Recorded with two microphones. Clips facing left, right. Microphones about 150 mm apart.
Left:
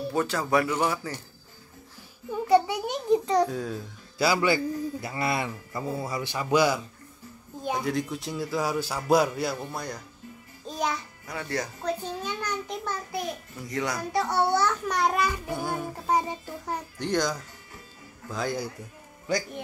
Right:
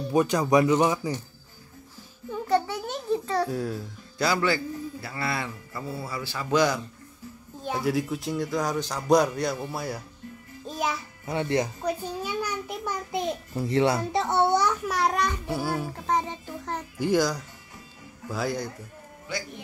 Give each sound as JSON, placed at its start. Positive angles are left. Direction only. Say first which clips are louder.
{"t": 0.1, "sound": "speech", "louder": "right 5 dB", "side_deg": -15}
{"t": 2.4, "sound": "a sound", "louder": "left 4 dB", "side_deg": 10}
{"t": 3.4, "sound": "a man's voice", "louder": "right 2 dB", "side_deg": -5}
{"t": 4.2, "sound": "a man's voice", "louder": "left 1 dB", "side_deg": 10}
{"t": 7.8, "sound": "a man's voice", "louder": "right 3 dB", "side_deg": -5}
{"t": 10.7, "sound": "music", "louder": "even", "side_deg": 0}
{"t": 11.2, "sound": "a child's voice", "louder": "right 7 dB", "side_deg": -25}
{"t": 12.0, "sound": "a child's voice", "louder": "right 2 dB", "side_deg": -10}
{"t": 14.9, "sound": "a man's voice", "louder": "even", "side_deg": 0}
{"t": 16.1, "sound": "speech", "louder": "left 1 dB", "side_deg": 10}
{"t": 17.0, "sound": "a man's voice", "louder": "right 4 dB", "side_deg": -5}
{"t": 19.3, "sound": "speech", "louder": "left 6 dB", "side_deg": 40}